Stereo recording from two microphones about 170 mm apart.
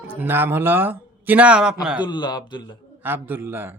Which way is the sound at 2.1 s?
25° left (ahead or behind).